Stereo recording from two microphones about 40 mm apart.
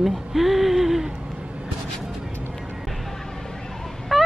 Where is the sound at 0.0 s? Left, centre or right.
Centre.